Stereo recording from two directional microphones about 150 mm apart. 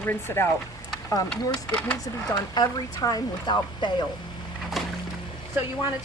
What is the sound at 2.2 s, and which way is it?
Speech, 25° left (ahead or behind).